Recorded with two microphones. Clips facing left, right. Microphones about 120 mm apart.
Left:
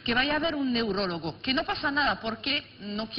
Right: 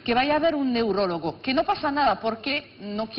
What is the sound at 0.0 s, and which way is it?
A woman's voice, 50° right (ahead or behind).